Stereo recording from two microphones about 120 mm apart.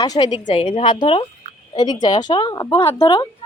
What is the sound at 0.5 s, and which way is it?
A woman's voice, 55° left (ahead or behind).